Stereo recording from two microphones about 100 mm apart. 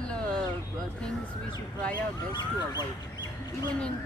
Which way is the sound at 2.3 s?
45° left (ahead or behind).